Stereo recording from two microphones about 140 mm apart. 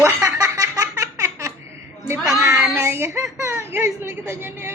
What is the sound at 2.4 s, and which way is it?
Child singing, 20° right (ahead or behind).